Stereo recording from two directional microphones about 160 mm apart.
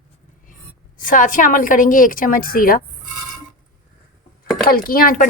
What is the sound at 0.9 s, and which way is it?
A woman's voice, 55° left (ahead or behind).